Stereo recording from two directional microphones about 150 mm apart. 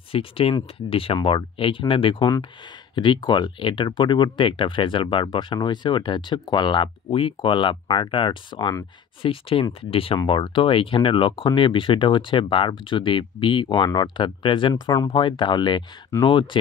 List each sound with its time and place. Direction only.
0.1 s speech: 40° left (ahead or behind)
16.1 s speech: 15° left (ahead or behind)